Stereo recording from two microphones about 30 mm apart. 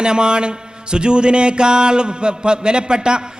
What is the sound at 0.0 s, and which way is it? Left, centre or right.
A man's voice, right.